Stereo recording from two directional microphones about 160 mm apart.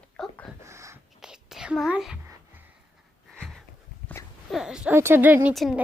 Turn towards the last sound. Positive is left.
turn(degrees=0)  # may be behind; listen again after turning